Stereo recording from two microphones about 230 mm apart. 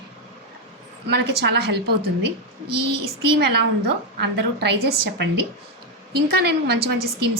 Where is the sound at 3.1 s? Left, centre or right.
Right.